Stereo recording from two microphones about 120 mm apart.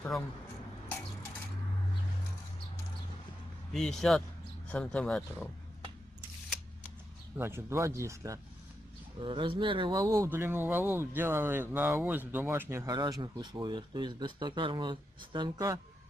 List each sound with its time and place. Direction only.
3.7 s a man's voice: 5° left (ahead or behind)
7.3 s speech: 20° right (ahead or behind)
9.2 s speech: 45° right (ahead or behind)
10.0 s speech: 25° right (ahead or behind)
12.9 s speech: 35° right (ahead or behind)